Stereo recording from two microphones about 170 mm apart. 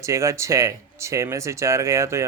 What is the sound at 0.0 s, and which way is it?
Speech, 15° right (ahead or behind).